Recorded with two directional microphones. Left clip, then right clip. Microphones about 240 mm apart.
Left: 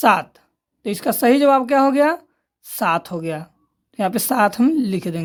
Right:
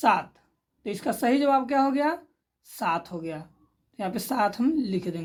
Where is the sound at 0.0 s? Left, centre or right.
Left.